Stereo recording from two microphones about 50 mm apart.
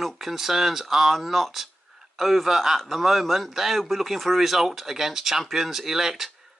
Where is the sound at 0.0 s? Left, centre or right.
Centre.